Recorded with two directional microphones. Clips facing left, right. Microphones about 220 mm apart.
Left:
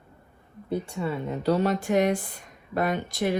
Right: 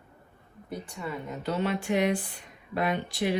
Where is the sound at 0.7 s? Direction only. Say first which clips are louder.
Left 7 dB; 25° left (ahead or behind).